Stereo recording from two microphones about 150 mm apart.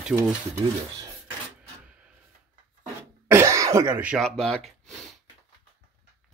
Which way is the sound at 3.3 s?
20° right (ahead or behind).